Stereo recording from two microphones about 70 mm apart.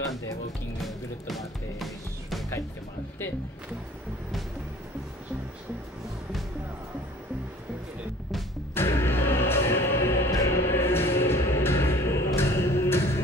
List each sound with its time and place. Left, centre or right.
0.8 s music: centre
8.7 s music: left